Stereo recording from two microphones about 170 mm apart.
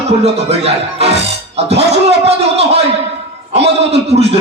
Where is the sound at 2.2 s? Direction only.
35° right (ahead or behind).